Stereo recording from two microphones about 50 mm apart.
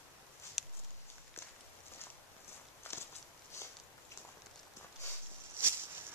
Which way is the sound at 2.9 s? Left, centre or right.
Left.